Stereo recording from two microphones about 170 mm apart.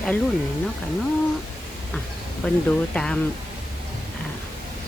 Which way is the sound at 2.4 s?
5° left (ahead or behind).